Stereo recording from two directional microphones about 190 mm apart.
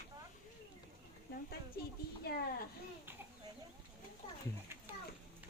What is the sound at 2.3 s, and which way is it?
Speech, 55° left (ahead or behind).